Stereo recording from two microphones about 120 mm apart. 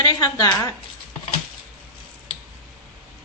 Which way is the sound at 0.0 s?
30° left (ahead or behind).